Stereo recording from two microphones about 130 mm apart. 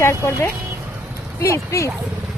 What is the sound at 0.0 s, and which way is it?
Speech, 20° left (ahead or behind).